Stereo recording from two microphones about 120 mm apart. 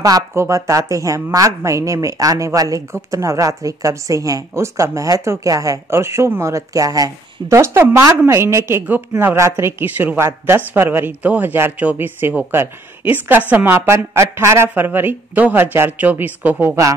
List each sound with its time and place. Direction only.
0.0 s a woman's voice: 25° right (ahead or behind)